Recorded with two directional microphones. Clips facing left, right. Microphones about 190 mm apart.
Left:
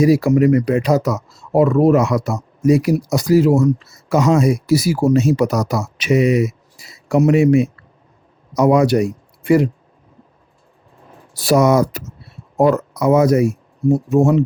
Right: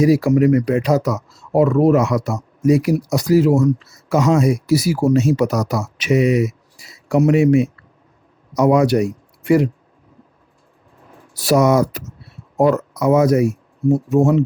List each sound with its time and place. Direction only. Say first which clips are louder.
0.0 s speech: left 1 dB; 35° left (ahead or behind)
11.4 s speech: left 1 dB; 30° left (ahead or behind)